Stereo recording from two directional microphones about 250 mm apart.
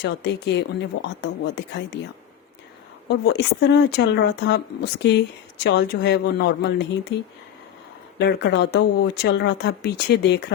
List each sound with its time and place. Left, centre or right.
0.0 s speech: left
3.1 s speech: left
8.2 s speech: left